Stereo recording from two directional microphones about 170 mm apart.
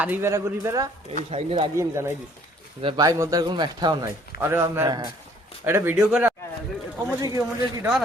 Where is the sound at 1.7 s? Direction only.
15° right (ahead or behind).